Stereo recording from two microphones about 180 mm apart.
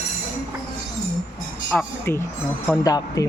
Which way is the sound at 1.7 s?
15° left (ahead or behind).